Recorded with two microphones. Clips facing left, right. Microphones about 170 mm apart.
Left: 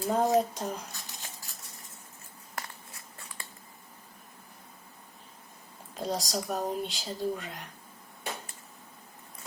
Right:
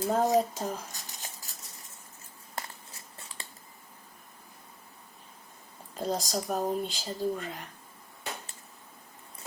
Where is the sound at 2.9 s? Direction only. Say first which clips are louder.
Even; 25° right (ahead or behind).